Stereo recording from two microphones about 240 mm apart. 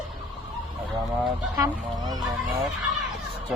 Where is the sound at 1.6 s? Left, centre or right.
Centre.